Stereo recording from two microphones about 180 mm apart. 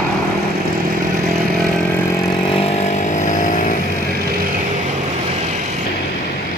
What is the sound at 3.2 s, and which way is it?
Vehicle, 45° left (ahead or behind).